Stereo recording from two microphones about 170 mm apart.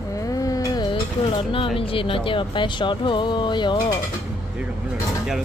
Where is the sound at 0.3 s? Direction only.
20° left (ahead or behind).